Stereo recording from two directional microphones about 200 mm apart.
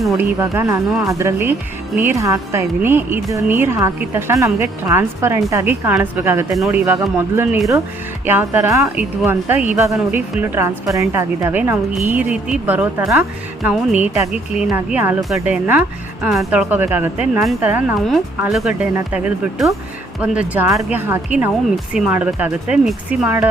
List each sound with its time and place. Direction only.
0.2 s a woman's voice: 15° right (ahead or behind)